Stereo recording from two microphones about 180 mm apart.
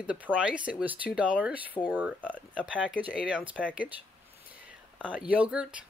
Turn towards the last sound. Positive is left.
turn(degrees=-5)  # may be behind; listen again after turning